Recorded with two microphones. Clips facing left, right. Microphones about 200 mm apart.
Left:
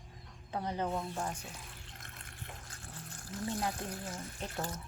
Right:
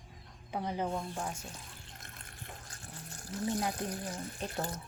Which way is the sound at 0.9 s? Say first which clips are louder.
Even; centre (ahead or behind).